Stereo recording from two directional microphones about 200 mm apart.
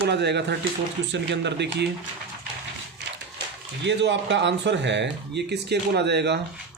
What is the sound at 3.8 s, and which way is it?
Speech, 60° right (ahead or behind).